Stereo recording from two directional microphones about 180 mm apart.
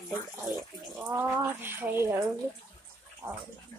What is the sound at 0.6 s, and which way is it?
Speech, 10° right (ahead or behind).